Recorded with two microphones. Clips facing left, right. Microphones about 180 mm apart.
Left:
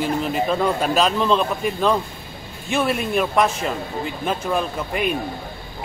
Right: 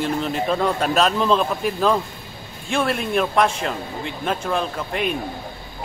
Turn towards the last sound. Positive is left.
turn(degrees=5)  # may be behind; listen again after turning